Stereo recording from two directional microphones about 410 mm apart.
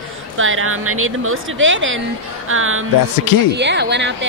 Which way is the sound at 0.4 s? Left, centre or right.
Right.